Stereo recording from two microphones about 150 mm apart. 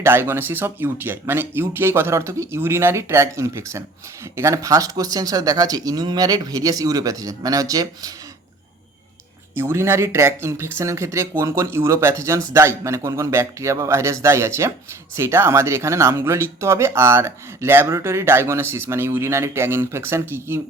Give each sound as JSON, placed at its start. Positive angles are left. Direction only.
{"t": 0.0, "sound": "speech", "side_deg": -15}
{"t": 9.6, "sound": "speech", "side_deg": -15}